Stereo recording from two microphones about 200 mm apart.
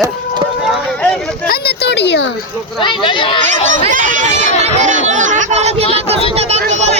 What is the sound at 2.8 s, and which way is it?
Speech, 25° left (ahead or behind).